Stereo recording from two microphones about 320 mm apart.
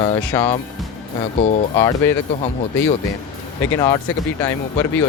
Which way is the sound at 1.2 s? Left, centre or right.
Centre.